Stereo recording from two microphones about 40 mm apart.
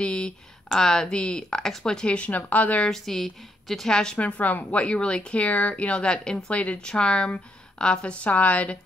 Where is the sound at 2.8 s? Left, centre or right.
Centre.